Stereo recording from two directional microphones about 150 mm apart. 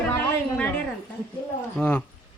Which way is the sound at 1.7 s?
10° left (ahead or behind).